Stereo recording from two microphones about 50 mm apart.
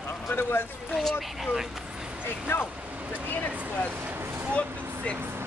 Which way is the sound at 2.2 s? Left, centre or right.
Left.